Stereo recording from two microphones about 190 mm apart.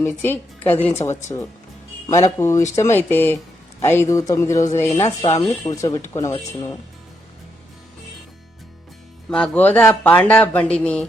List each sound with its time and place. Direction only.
0.0 s a woman's voice: 10° left (ahead or behind)
9.3 s speech: 5° left (ahead or behind)